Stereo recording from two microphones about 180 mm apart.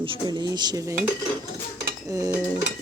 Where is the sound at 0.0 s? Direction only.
25° right (ahead or behind).